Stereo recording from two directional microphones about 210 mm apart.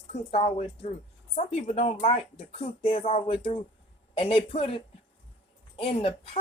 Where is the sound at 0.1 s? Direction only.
30° left (ahead or behind).